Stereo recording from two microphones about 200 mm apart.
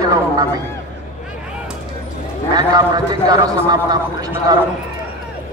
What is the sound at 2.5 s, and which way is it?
A man's voice, 20° right (ahead or behind).